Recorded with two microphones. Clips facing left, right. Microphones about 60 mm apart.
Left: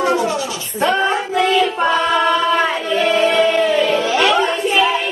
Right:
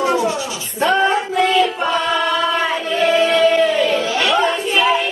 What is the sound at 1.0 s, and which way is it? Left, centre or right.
Music, centre.